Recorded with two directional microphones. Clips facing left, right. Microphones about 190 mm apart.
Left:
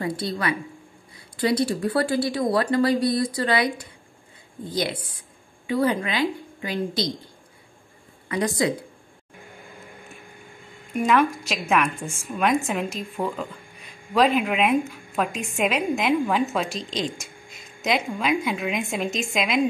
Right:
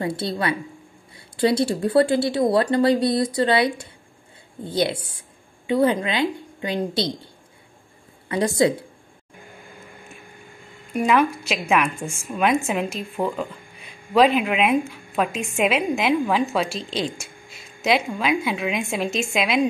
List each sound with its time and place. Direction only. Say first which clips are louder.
0.0 s speech: right 2 dB; 25° right (ahead or behind)
8.3 s speech: right 4 dB; 30° right (ahead or behind)
11.1 s a woman's voice: right 1 dB; 5° right (ahead or behind)